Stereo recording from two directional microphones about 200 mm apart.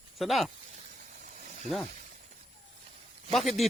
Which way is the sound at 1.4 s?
35° right (ahead or behind).